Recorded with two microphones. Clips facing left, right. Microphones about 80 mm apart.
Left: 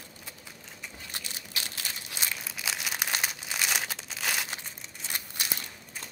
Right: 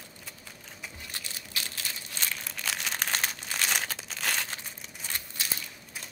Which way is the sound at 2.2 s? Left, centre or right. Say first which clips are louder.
Even; centre.